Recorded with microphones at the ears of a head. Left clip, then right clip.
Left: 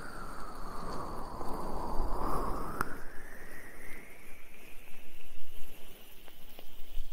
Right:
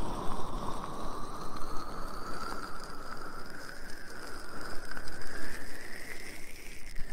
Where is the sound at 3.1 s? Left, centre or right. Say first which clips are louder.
Right 6 dB; right.